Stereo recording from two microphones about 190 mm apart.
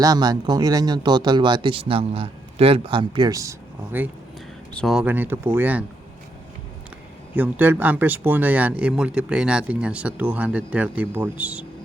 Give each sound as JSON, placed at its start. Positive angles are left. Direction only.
{"t": 0.0, "sound": "speech", "side_deg": -20}
{"t": 4.7, "sound": "speech", "side_deg": 0}
{"t": 7.3, "sound": "speech", "side_deg": -10}